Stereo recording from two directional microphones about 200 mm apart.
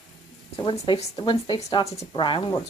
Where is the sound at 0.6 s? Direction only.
30° left (ahead or behind).